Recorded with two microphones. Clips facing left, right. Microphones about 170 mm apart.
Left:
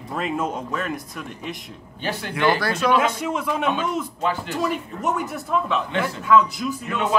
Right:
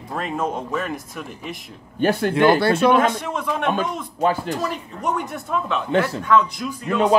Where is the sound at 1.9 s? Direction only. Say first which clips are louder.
Right 10 dB; 50° right (ahead or behind).